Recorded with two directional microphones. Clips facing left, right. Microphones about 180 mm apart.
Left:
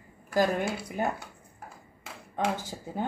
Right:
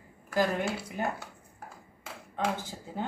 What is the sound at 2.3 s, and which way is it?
Speech, 15° left (ahead or behind).